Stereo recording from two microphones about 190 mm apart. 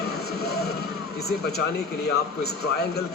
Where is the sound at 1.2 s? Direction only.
55° left (ahead or behind).